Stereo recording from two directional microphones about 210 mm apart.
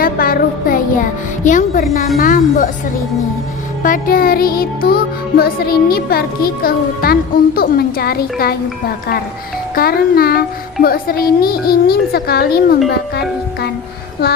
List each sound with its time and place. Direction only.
0.0 s music: 45° left (ahead or behind)
1.5 s speech: 40° left (ahead or behind)
3.8 s music: 40° left (ahead or behind)
9.7 s music: 45° left (ahead or behind)